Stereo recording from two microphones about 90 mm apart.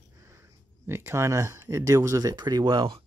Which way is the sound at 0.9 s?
30° right (ahead or behind).